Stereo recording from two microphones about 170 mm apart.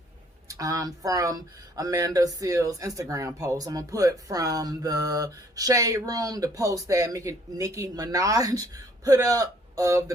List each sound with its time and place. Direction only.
0.4 s speech: 20° right (ahead or behind)